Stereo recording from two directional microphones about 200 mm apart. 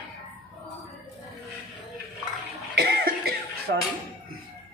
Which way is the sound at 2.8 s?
50° right (ahead or behind).